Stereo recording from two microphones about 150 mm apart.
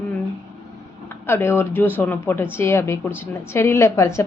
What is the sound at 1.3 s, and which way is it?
A woman's voice, 15° left (ahead or behind).